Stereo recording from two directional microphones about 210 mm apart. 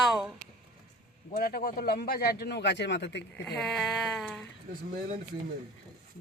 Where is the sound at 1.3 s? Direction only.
50° left (ahead or behind).